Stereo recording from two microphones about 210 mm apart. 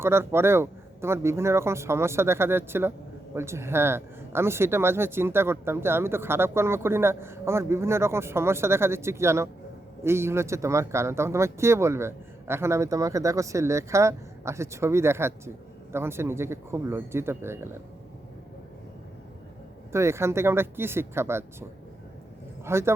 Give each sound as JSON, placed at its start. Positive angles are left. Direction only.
{"t": 0.0, "sound": "speech", "side_deg": -10}
{"t": 19.9, "sound": "speech", "side_deg": -15}
{"t": 22.6, "sound": "speech", "side_deg": -10}